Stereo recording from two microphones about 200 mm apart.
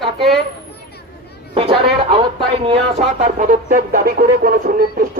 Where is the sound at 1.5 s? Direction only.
30° right (ahead or behind).